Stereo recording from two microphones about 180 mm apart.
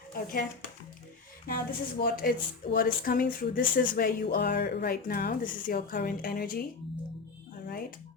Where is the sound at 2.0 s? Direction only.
55° left (ahead or behind).